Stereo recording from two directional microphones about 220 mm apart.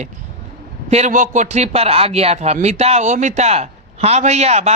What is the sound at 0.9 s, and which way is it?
A man's voice, 30° right (ahead or behind).